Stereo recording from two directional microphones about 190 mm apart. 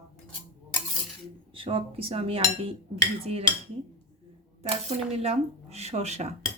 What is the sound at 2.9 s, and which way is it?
Speech, 30° right (ahead or behind).